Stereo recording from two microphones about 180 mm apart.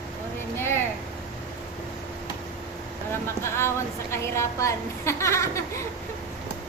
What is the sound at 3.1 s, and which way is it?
A woman's voice, 15° left (ahead or behind).